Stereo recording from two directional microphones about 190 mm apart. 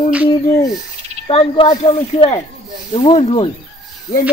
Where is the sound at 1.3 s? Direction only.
30° left (ahead or behind).